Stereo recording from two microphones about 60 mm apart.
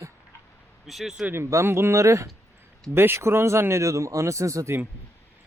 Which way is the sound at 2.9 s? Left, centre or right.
Right.